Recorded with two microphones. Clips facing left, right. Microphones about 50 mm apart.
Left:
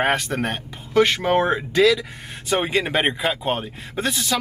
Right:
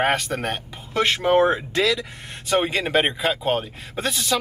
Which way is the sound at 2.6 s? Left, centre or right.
Centre.